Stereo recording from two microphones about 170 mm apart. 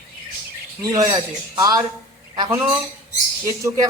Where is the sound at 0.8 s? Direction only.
20° right (ahead or behind).